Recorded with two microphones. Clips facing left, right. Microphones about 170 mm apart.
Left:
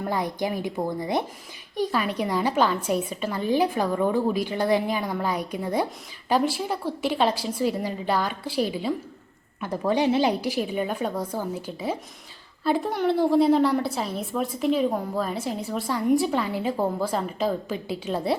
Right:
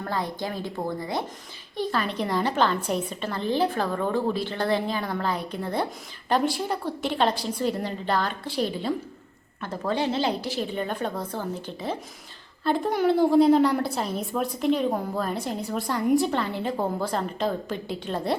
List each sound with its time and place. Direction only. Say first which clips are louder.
0.0 s a woman's voice: left 3 dB; 15° left (ahead or behind)